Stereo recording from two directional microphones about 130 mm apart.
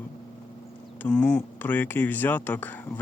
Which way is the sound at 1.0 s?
10° left (ahead or behind).